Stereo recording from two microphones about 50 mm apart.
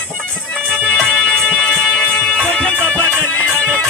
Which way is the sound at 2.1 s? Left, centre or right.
Centre.